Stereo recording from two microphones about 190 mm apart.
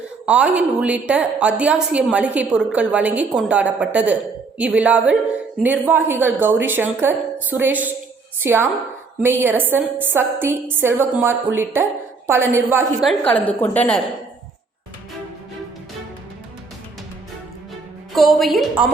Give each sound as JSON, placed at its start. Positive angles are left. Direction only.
{"t": 0.3, "sound": "a woman's voice", "side_deg": -5}
{"t": 13.1, "sound": "a woman's voice", "side_deg": 5}
{"t": 18.1, "sound": "a woman's voice", "side_deg": 0}